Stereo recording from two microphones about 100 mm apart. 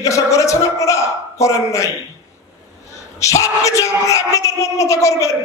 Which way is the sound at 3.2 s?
30° left (ahead or behind).